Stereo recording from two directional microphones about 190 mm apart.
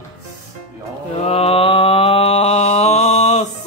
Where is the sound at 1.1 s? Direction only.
35° left (ahead or behind).